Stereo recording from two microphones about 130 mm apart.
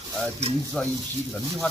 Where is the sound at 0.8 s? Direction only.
10° left (ahead or behind).